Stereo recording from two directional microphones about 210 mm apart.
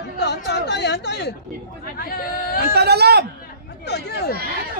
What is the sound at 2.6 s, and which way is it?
Speech, 50° right (ahead or behind).